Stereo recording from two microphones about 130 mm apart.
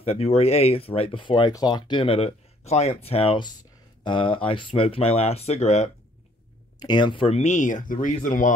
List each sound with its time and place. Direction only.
0.0 s speech: 50° left (ahead or behind)
4.0 s speech: 40° left (ahead or behind); by 5.9 s 60° left (ahead or behind)
6.8 s speech: 35° left (ahead or behind); by 8.5 s 80° left